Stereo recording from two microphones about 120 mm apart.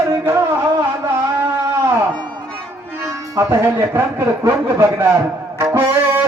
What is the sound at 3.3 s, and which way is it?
Music, 20° right (ahead or behind).